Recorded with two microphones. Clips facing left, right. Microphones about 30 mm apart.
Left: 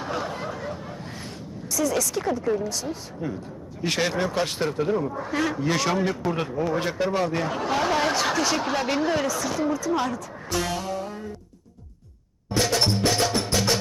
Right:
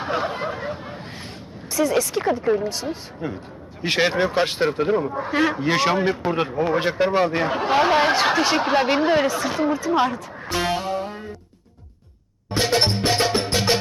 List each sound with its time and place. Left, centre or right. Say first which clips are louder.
0.0 s a sound: right 5 dB; right
1.7 s a man's voice: right 4 dB; right
12.5 s music: right 3 dB; right